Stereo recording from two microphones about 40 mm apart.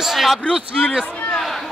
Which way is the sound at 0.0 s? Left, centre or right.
Centre.